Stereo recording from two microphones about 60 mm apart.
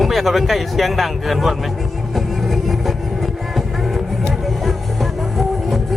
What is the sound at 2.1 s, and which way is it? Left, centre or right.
Music, centre.